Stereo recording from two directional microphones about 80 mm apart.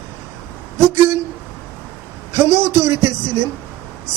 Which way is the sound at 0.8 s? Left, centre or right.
Right.